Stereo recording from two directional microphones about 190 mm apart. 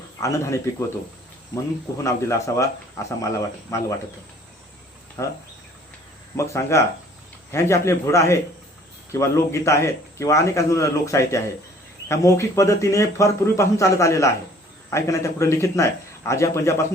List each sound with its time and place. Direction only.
0.2 s a man's voice: 15° left (ahead or behind)
2.0 s a man's voice: 15° left (ahead or behind)
5.2 s a man's voice: 15° left (ahead or behind)